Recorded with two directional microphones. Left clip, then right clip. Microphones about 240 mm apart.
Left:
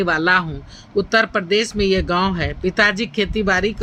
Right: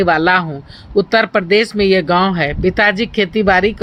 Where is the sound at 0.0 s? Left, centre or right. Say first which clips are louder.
Right 4 dB; centre.